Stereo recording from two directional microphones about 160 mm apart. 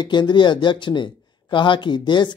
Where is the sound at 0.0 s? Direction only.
30° left (ahead or behind).